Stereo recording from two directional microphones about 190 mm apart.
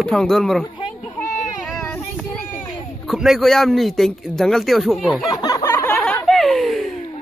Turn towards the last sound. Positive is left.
turn(degrees=0)  # may be behind; listen again after turning